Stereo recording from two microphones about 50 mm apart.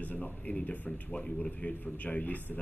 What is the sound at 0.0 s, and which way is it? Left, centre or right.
Speech, left.